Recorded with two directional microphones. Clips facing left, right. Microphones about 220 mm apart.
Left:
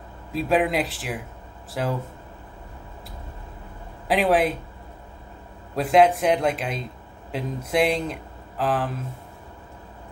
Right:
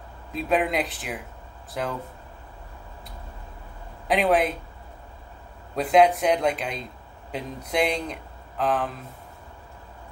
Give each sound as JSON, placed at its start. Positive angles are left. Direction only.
{"t": 0.3, "sound": "speech", "side_deg": 0}
{"t": 4.1, "sound": "speech", "side_deg": 0}
{"t": 5.8, "sound": "speech", "side_deg": 0}